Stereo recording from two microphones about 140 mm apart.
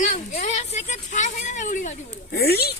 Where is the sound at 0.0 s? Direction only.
65° left (ahead or behind).